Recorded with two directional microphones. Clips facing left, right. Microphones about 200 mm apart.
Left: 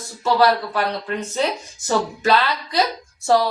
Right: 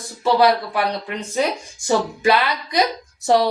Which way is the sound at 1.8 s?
15° right (ahead or behind).